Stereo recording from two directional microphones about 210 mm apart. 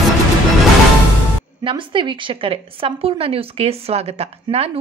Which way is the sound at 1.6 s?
25° right (ahead or behind).